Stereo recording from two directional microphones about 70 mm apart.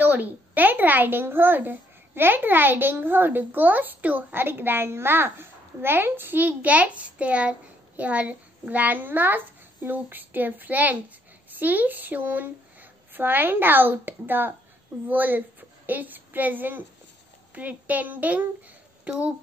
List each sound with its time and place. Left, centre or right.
0.0 s a child's voice: right